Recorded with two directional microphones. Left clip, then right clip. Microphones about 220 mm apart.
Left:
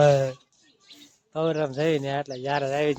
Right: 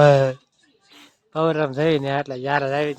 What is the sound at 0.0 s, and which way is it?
Speech, 20° right (ahead or behind).